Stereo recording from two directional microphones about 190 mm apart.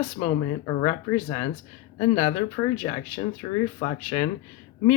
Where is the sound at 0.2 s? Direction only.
15° left (ahead or behind).